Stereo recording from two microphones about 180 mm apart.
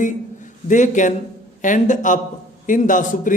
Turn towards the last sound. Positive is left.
turn(degrees=45)  # may be behind; listen again after turning